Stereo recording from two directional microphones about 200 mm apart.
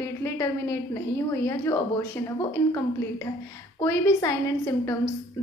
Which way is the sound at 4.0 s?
15° left (ahead or behind).